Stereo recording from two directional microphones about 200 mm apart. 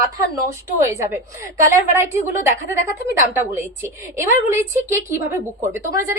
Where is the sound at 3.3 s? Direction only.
10° right (ahead or behind).